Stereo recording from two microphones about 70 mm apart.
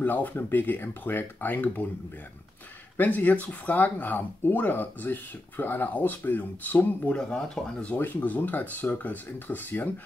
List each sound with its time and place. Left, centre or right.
0.0 s speech: left
3.0 s speech: left
7.2 s speech: centre
7.9 s speech: left